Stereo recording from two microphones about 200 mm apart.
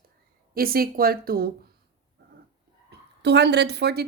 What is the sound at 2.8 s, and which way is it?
A woman's voice, 55° right (ahead or behind).